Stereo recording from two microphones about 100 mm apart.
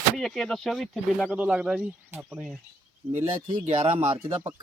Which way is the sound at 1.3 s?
10° right (ahead or behind).